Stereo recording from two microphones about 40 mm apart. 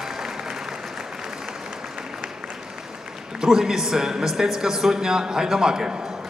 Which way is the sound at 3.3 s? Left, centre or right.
Centre.